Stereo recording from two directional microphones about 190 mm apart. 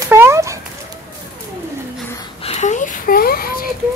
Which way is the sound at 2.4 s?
40° left (ahead or behind).